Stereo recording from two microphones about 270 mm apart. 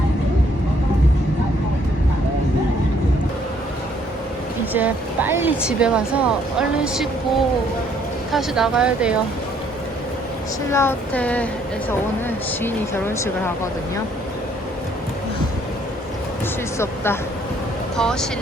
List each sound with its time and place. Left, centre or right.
4.7 s speech: centre
8.3 s speech: centre
10.7 s speech: centre
12.6 s speech: centre
16.7 s speech: centre